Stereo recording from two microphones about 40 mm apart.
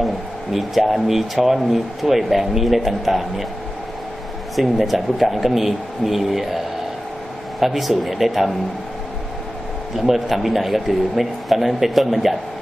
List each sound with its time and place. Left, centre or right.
0.0 s speech: centre
4.6 s speech: centre
7.6 s speech: centre
9.9 s speech: centre